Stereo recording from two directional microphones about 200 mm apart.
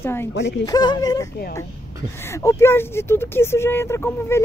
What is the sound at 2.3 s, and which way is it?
Speech, 15° left (ahead or behind).